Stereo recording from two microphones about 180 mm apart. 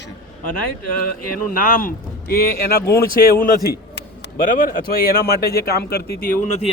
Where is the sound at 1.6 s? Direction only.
50° left (ahead or behind).